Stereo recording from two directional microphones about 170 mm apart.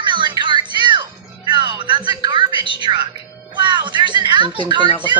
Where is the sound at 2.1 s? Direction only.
25° right (ahead or behind).